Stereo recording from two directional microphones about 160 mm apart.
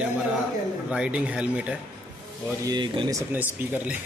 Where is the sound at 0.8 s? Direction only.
5° right (ahead or behind).